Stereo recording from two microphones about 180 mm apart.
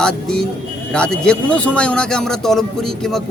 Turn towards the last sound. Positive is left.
turn(degrees=5)  # may be behind; listen again after turning